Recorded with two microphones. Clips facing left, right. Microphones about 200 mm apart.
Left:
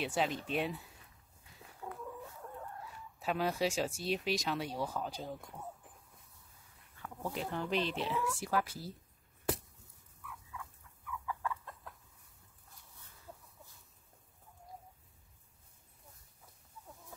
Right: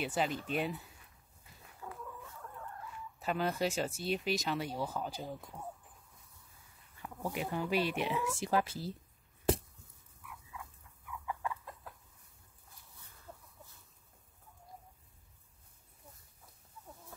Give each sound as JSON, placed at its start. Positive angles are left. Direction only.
{"t": 0.0, "sound": "speech", "side_deg": 0}
{"t": 1.8, "sound": "a sound", "side_deg": 20}
{"t": 3.2, "sound": "speech", "side_deg": 0}
{"t": 7.0, "sound": "speech", "side_deg": -10}
{"t": 11.1, "sound": "chicken", "side_deg": -20}